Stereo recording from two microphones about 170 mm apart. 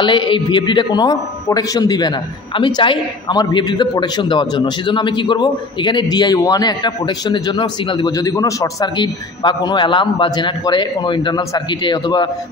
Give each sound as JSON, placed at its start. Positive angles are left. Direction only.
{"t": 0.0, "sound": "a man's voice", "side_deg": 30}